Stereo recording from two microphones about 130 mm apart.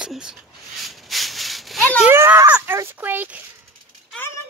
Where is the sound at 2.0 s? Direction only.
20° right (ahead or behind).